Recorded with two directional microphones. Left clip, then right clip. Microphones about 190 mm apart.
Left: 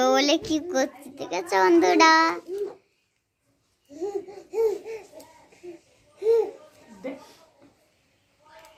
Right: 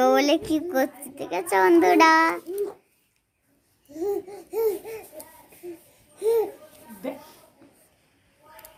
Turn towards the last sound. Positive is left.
turn(degrees=-65)  # may be behind; listen again after turning